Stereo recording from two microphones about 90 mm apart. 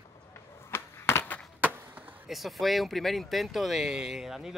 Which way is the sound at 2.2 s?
Centre (ahead or behind).